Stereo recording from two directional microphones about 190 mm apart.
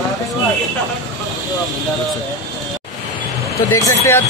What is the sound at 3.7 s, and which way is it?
Speech, 15° left (ahead or behind).